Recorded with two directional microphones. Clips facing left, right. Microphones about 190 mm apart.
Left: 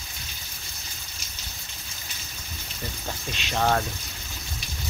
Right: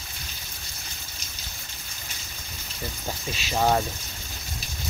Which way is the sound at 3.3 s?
5° right (ahead or behind).